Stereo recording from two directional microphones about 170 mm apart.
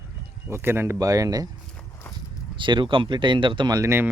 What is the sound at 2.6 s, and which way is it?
Speech, 30° right (ahead or behind).